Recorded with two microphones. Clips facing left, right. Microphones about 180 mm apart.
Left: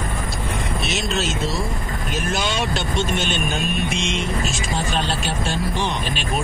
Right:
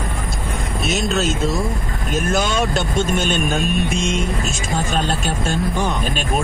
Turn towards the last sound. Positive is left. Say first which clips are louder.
# right 3 dB
turn(degrees=-45)  # may be behind; listen again after turning